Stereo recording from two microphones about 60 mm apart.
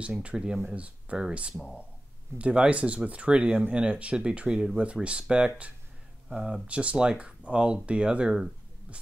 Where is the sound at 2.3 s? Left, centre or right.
Centre.